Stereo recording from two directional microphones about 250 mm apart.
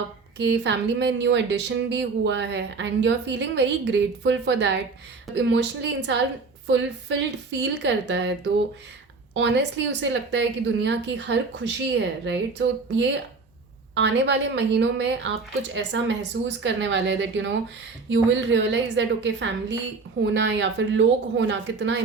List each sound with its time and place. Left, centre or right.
0.3 s speech: right
9.3 s speech: right